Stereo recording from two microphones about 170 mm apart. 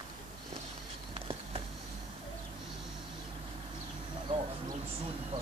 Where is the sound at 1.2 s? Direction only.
35° right (ahead or behind).